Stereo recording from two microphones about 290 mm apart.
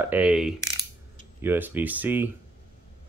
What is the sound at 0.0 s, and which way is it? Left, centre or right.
Mechanisms, centre.